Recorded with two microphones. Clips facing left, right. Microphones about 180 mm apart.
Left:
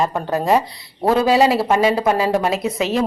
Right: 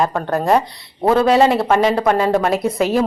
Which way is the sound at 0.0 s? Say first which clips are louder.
Right 1 dB; 5° left (ahead or behind).